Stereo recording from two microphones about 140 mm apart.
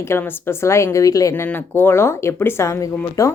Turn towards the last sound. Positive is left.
turn(degrees=20)  # may be behind; listen again after turning